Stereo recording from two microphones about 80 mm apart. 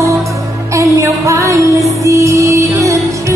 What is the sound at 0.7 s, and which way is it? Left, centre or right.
Music, right.